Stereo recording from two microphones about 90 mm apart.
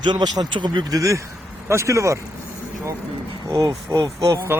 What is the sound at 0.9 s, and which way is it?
Speech, 35° right (ahead or behind).